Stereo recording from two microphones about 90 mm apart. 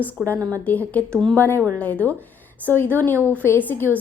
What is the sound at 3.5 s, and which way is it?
Speech, 20° left (ahead or behind).